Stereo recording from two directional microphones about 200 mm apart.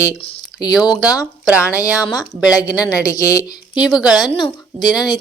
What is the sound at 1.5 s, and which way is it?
Speech, 10° right (ahead or behind).